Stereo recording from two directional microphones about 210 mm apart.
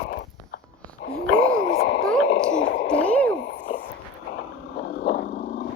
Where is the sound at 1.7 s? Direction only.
45° left (ahead or behind).